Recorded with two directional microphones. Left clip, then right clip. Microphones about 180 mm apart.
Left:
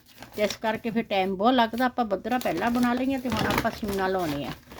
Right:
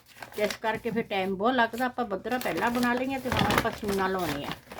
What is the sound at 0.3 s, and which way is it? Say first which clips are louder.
Speech: left 2 dB; 35° left (ahead or behind).